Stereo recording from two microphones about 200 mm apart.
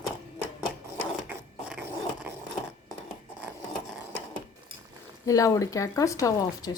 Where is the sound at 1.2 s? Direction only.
10° right (ahead or behind).